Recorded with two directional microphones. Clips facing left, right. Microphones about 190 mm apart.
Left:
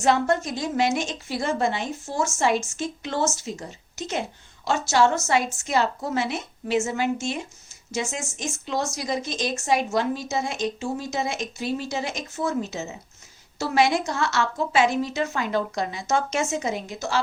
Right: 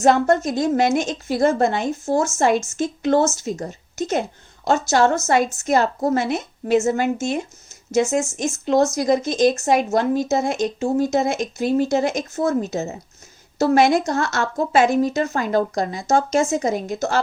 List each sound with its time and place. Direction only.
0.0 s a woman's voice: 45° right (ahead or behind)